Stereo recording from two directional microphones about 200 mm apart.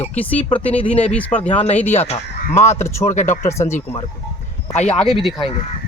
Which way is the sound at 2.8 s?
15° left (ahead or behind).